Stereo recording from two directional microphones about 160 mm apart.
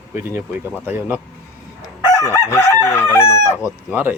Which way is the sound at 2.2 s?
15° left (ahead or behind).